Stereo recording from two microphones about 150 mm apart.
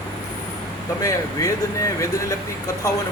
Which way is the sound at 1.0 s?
20° left (ahead or behind).